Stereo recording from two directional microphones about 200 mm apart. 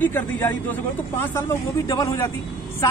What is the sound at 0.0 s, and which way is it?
Speech, 10° left (ahead or behind).